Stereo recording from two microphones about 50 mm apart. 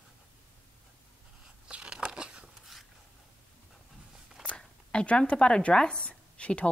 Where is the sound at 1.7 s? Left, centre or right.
Centre.